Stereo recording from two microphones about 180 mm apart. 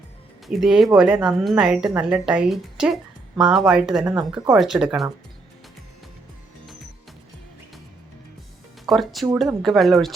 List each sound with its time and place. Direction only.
0.4 s a woman's voice: centre (ahead or behind)
4.0 s speech: 15° right (ahead or behind)
4.5 s a woman's voice: centre (ahead or behind)
8.9 s a woman's voice: centre (ahead or behind)